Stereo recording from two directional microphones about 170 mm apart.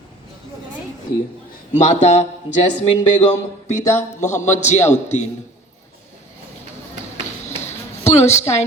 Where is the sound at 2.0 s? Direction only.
40° left (ahead or behind).